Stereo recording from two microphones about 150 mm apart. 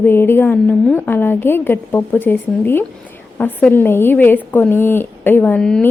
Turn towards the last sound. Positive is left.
turn(degrees=5)  # may be behind; listen again after turning